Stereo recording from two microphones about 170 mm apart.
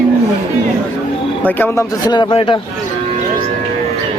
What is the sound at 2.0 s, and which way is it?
Speech, 30° left (ahead or behind).